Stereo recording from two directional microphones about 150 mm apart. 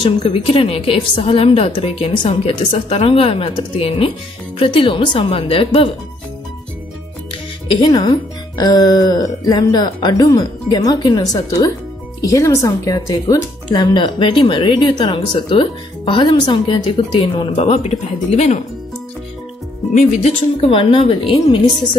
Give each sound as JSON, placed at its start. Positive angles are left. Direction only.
{"t": 0.0, "sound": "speech", "side_deg": 40}
{"t": 7.7, "sound": "speech", "side_deg": 30}
{"t": 17.6, "sound": "speech", "side_deg": 45}
{"t": 19.9, "sound": "speech", "side_deg": 50}